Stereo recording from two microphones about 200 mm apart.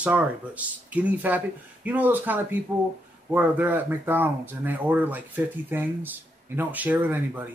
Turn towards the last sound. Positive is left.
turn(degrees=-10)  # may be behind; listen again after turning